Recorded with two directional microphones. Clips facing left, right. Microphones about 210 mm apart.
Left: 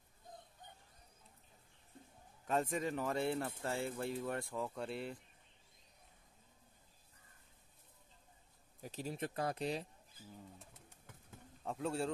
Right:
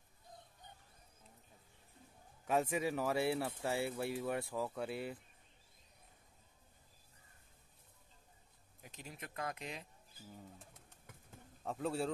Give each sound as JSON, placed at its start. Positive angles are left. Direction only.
{"t": 2.4, "sound": "speech", "side_deg": -10}
{"t": 8.8, "sound": "speech", "side_deg": 35}
{"t": 11.6, "sound": "a man's voice", "side_deg": 0}